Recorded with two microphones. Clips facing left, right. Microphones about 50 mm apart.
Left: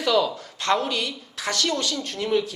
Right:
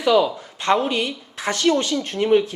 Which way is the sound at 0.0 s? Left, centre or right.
Centre.